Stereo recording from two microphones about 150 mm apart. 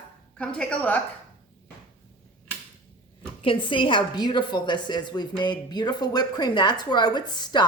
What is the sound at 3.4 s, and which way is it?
A woman's voice, 35° left (ahead or behind).